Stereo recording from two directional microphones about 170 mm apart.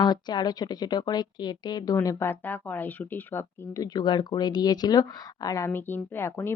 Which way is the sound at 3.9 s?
25° left (ahead or behind).